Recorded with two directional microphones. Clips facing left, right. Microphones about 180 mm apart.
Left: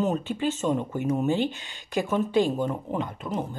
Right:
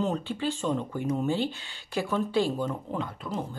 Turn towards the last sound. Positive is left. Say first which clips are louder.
# left 3 dB
turn(degrees=20)  # may be behind; listen again after turning